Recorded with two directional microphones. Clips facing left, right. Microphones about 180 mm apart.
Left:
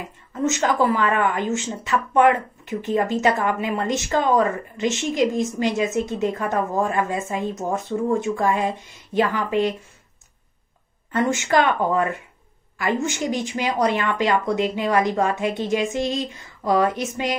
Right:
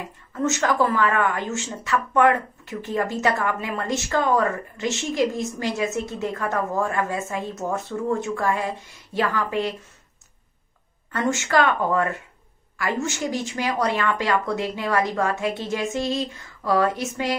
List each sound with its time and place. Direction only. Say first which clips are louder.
0.3 s speech: left 1 dB; 20° left (ahead or behind)
11.1 s a woman's voice: left 3 dB; 20° left (ahead or behind)